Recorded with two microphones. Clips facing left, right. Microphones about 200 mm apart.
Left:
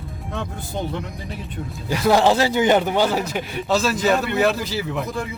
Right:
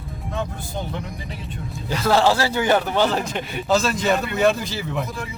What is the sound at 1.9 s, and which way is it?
Speech, 15° left (ahead or behind).